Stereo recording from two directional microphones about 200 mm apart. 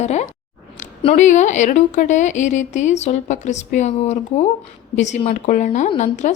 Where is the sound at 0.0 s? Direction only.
35° left (ahead or behind).